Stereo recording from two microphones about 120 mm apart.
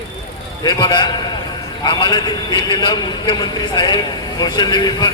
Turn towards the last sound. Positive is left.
turn(degrees=35)  # may be behind; listen again after turning